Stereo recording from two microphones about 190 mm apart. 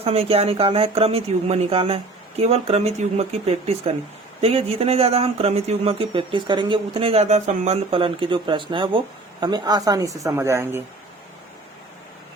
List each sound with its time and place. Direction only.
0.0 s speech: 30° right (ahead or behind); by 10.8 s 10° right (ahead or behind)